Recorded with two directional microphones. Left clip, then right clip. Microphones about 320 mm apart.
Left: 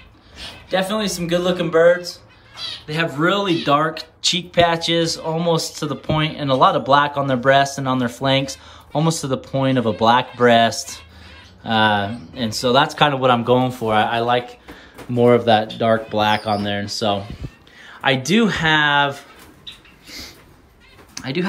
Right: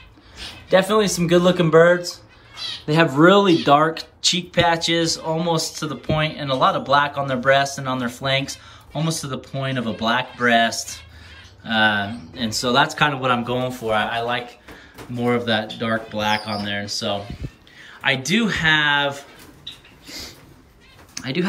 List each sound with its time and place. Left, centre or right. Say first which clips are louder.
0.7 s speech: right 4 dB; centre
2.9 s speech: right 5 dB; centre
20.1 s a sound: even; centre